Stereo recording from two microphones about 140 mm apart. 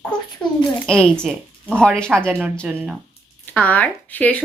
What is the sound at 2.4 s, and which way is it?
Speech, 15° right (ahead or behind).